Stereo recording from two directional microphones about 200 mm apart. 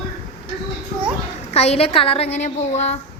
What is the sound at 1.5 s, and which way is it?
A woman's voice, 30° left (ahead or behind).